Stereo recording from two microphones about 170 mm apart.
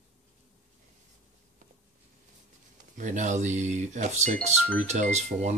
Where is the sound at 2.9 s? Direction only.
45° right (ahead or behind).